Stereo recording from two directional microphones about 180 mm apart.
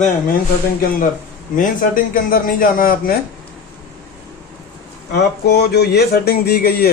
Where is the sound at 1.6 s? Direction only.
50° left (ahead or behind).